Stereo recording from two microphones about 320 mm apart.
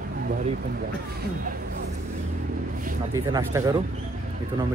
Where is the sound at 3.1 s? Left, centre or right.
Centre.